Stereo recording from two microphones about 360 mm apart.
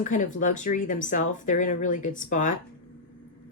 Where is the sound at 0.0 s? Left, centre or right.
Left.